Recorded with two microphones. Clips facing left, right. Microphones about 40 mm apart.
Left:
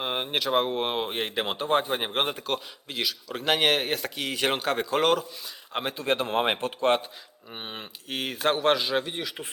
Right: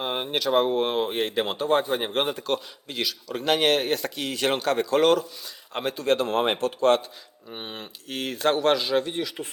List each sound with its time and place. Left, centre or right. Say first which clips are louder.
0.0 s speech: right 2 dB; centre
7.5 s speech: right 1 dB; centre